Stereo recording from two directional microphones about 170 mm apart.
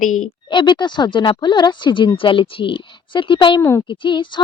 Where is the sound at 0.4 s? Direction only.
25° left (ahead or behind).